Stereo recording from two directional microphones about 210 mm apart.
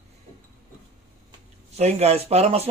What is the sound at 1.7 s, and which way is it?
Speech, 30° right (ahead or behind).